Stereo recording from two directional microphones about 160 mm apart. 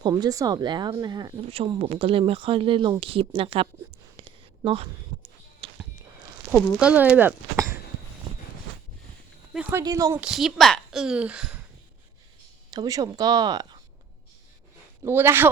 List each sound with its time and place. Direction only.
0.0 s speech: 25° right (ahead or behind)
1.5 s a woman's voice: 35° right (ahead or behind)
5.6 s a sound: 35° right (ahead or behind)
6.5 s speech: 5° right (ahead or behind)
8.3 s a sound: 30° right (ahead or behind)
9.5 s speech: 10° right (ahead or behind)
9.8 s speech: 20° right (ahead or behind)
10.2 s a woman's voice: centre (ahead or behind)
12.7 s speech: 25° right (ahead or behind)
15.0 s speech: 15° right (ahead or behind)